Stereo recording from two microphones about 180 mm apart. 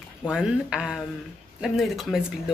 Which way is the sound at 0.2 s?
5° right (ahead or behind).